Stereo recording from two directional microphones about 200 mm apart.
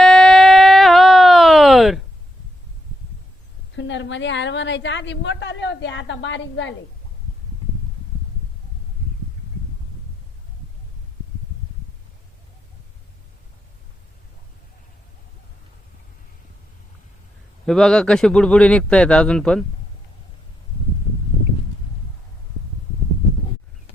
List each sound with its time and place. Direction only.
0.0 s a sound: 5° left (ahead or behind)
3.8 s a woman's voice: 65° left (ahead or behind)
17.7 s speech: 5° left (ahead or behind)